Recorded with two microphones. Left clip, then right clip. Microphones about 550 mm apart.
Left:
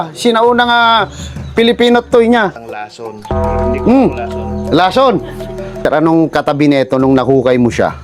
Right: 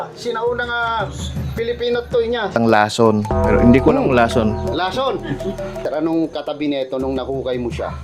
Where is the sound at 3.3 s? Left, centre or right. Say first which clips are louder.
Left 2 dB; centre.